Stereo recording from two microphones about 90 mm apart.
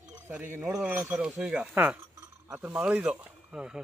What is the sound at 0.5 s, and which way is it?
Speech, 25° right (ahead or behind).